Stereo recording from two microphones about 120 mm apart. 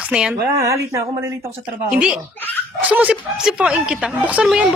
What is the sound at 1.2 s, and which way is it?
Speech, 20° right (ahead or behind).